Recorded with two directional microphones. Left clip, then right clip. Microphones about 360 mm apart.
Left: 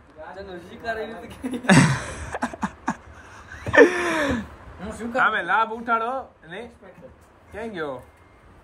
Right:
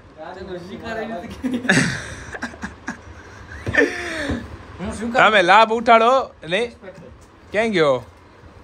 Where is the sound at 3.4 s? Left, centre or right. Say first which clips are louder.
Left 3 dB; centre.